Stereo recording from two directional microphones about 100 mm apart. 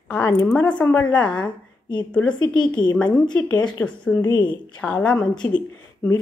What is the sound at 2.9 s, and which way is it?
Speech, 10° left (ahead or behind).